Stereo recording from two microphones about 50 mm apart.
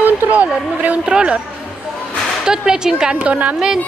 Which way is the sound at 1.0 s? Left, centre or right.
Centre.